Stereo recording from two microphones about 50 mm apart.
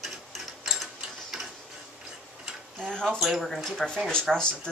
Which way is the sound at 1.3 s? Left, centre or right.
Centre.